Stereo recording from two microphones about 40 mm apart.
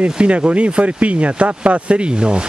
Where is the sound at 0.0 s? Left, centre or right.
Right.